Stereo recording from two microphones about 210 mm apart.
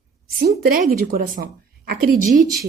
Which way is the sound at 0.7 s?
45° right (ahead or behind).